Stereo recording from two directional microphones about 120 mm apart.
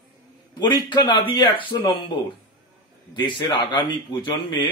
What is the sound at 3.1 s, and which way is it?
Speech, 40° left (ahead or behind).